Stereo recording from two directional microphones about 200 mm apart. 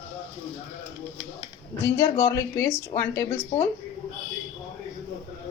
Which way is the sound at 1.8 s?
15° left (ahead or behind).